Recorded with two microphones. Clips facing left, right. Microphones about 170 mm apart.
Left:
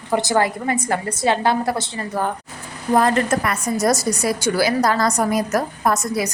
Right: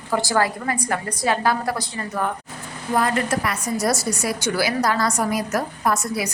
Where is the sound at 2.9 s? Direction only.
45° left (ahead or behind).